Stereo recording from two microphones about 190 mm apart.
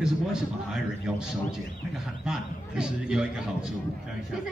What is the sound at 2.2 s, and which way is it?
A man's voice, 5° right (ahead or behind).